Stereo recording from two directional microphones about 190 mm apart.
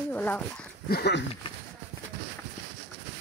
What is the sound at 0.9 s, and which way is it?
Speech, 60° left (ahead or behind).